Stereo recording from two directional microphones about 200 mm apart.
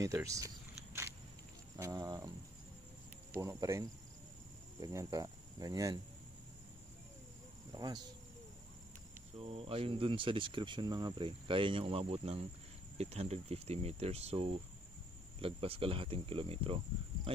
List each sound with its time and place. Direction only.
0.0 s cricket: 15° right (ahead or behind)
1.8 s speech: 20° right (ahead or behind)
3.3 s cricket: 15° right (ahead or behind)
4.8 s cricket: 15° right (ahead or behind)
7.7 s speech: 20° right (ahead or behind)
9.4 s speech: 30° right (ahead or behind)